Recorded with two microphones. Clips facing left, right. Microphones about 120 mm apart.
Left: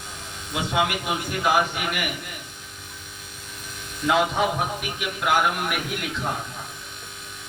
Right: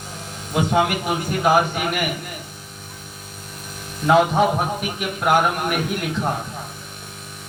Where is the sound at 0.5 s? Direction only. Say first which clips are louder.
Right 5 dB; 45° right (ahead or behind).